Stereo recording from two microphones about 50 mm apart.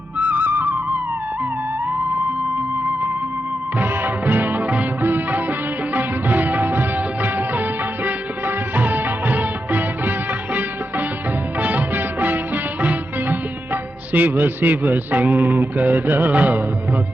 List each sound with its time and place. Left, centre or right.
0.2 s music: right
3.8 s music: right
5.0 s music of bollywood: right
11.6 s music: right
14.1 s a man's voice: right